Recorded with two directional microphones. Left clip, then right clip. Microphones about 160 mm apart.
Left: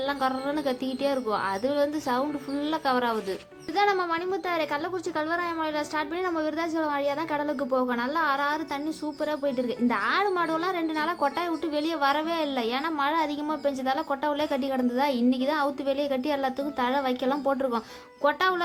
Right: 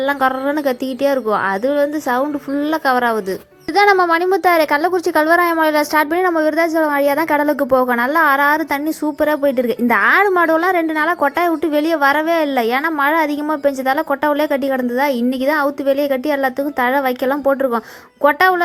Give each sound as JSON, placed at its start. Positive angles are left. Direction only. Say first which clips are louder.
{"t": 1.0, "sound": "a woman's voice", "louder": "right 11 dB", "side_deg": -40}
{"t": 3.8, "sound": "a woman's voice", "louder": "right 13 dB", "side_deg": -50}